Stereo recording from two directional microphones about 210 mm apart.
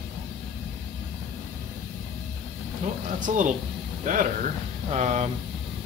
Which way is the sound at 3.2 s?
35° right (ahead or behind).